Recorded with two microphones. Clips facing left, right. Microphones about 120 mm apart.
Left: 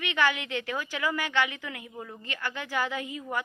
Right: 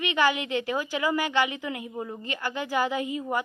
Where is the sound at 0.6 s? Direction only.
30° right (ahead or behind).